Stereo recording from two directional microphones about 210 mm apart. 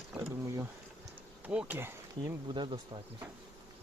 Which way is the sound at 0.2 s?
15° right (ahead or behind).